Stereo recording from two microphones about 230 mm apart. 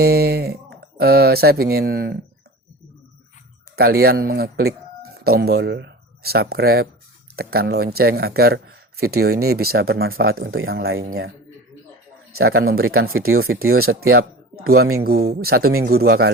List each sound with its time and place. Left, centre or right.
0.0 s speech: right
3.8 s speech: right
10.1 s speech: right
11.0 s speech: right
12.3 s a man's voice: right
13.7 s speech: right
14.7 s speech: right
15.0 s speech: right